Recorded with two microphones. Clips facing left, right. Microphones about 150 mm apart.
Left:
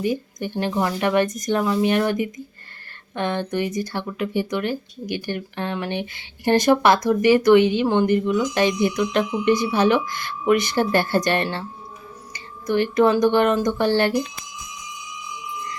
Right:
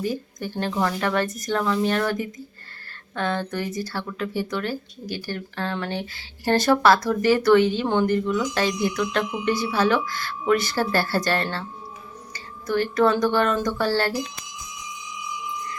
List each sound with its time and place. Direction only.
0.0 s speech: 15° left (ahead or behind)